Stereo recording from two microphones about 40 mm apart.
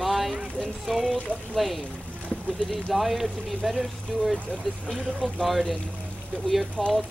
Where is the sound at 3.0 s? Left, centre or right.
Centre.